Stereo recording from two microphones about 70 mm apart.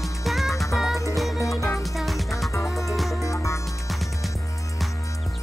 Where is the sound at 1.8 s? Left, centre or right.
Centre.